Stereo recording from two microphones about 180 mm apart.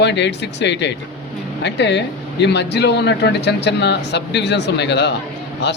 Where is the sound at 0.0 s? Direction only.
75° left (ahead or behind).